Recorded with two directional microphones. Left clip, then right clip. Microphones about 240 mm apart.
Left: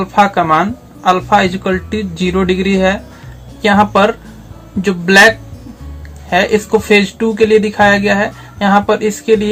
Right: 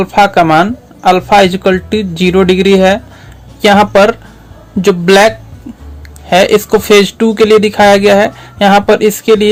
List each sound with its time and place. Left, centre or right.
0.0 s speech: right
6.3 s speech: right